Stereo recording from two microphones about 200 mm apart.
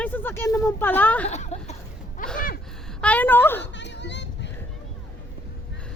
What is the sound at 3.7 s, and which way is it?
Music, 60° left (ahead or behind).